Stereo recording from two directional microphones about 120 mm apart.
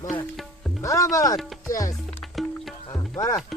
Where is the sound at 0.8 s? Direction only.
25° left (ahead or behind).